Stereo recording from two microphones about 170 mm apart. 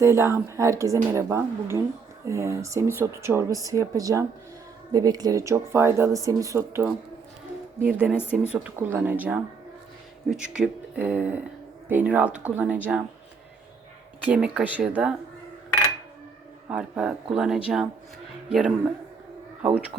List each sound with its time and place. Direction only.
0.0 s speech: 15° right (ahead or behind)
14.3 s speech: 5° right (ahead or behind)
16.6 s a man's voice: 5° right (ahead or behind)